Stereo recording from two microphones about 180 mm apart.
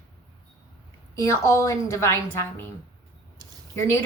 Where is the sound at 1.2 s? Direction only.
15° left (ahead or behind).